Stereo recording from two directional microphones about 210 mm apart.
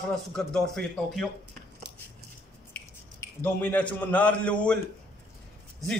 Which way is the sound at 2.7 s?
5° left (ahead or behind).